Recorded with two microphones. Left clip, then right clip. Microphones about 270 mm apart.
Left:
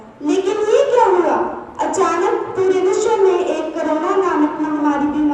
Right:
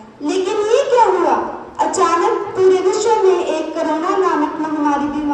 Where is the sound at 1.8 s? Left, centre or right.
Right.